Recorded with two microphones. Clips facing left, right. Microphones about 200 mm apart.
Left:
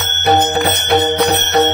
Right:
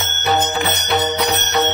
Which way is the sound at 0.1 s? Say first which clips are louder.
Left 6 dB; 60° left (ahead or behind).